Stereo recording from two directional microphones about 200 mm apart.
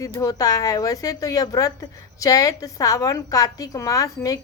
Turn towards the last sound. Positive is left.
turn(degrees=15)  # may be behind; listen again after turning